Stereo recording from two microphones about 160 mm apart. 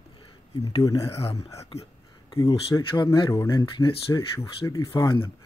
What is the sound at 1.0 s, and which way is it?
Speech, 40° left (ahead or behind).